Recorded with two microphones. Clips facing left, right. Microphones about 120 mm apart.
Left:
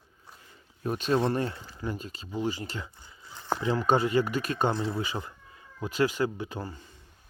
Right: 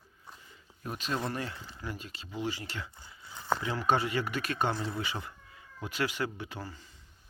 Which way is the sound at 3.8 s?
40° left (ahead or behind).